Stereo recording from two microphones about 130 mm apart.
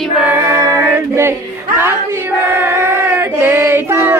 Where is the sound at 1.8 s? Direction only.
20° right (ahead or behind).